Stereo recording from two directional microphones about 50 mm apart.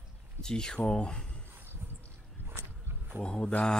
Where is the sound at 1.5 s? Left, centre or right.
Right.